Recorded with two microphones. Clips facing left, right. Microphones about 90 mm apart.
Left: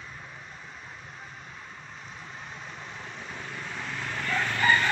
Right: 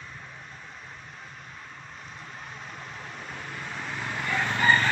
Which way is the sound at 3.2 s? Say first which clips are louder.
Right 1 dB; centre (ahead or behind).